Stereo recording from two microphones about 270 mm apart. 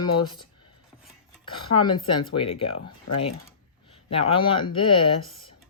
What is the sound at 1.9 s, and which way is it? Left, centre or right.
Speech, centre.